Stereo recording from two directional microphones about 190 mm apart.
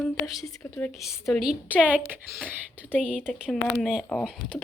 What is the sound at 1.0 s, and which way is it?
A woman's voice, centre (ahead or behind).